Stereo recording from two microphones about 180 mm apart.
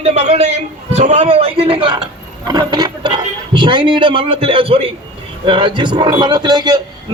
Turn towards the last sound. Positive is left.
turn(degrees=-20)  # may be behind; listen again after turning